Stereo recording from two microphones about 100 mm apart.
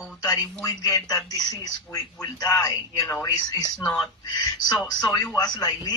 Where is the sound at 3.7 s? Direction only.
5° left (ahead or behind).